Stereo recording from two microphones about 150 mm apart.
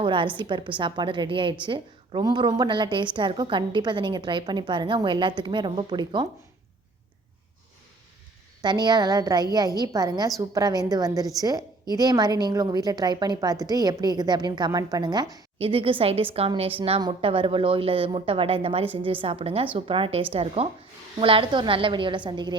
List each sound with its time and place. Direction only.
0.0 s a woman's voice: 35° right (ahead or behind)
8.6 s a woman's voice: 30° right (ahead or behind)
15.5 s a woman's voice: 40° right (ahead or behind)